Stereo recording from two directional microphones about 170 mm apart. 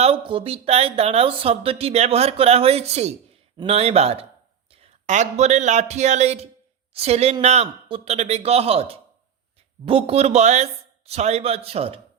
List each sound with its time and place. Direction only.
0.0 s speech: 30° right (ahead or behind)